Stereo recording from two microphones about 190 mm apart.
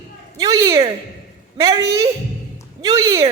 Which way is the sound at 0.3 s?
20° right (ahead or behind).